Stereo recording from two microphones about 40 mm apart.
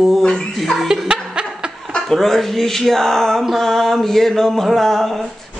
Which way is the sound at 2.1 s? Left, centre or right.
Centre.